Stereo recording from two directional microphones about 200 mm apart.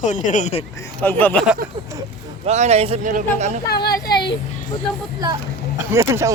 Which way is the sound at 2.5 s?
35° right (ahead or behind).